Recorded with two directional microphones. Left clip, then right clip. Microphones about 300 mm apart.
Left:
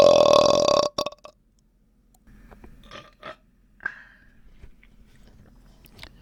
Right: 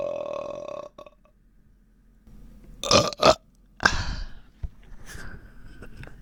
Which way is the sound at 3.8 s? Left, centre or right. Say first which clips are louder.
Right 11 dB; right.